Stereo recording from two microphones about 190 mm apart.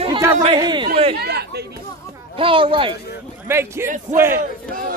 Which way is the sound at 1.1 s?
55° right (ahead or behind).